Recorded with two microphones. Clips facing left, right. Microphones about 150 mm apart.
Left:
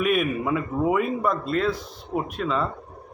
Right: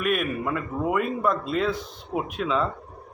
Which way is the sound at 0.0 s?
Centre (ahead or behind).